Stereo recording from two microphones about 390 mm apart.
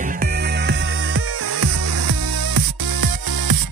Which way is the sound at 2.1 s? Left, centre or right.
Right.